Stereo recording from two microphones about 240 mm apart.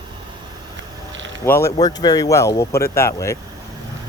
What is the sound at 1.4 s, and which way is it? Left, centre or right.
Speech, centre.